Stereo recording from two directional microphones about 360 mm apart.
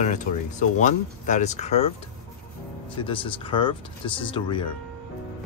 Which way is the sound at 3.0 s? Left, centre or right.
Centre.